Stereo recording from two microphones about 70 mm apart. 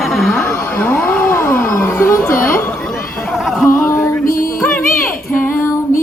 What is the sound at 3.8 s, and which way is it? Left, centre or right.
Music, left.